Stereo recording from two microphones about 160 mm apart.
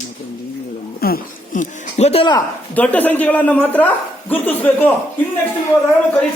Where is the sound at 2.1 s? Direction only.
35° left (ahead or behind).